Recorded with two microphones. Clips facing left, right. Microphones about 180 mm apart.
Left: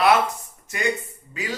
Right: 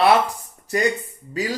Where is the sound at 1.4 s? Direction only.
35° right (ahead or behind).